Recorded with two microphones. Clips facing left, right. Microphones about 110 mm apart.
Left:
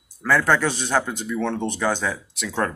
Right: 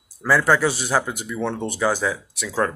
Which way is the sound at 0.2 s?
10° right (ahead or behind).